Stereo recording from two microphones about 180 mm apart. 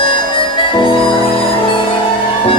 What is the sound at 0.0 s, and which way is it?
Harmonica, 30° left (ahead or behind).